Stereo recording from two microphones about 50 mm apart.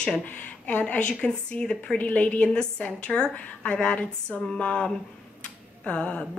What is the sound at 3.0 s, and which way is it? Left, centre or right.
A woman's voice, centre.